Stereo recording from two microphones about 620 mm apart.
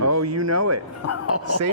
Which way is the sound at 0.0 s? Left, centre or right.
Right.